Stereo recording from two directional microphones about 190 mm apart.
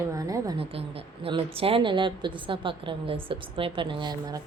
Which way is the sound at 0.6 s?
30° right (ahead or behind).